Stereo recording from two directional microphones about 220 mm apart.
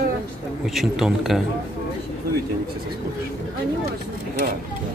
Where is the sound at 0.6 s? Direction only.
Centre (ahead or behind).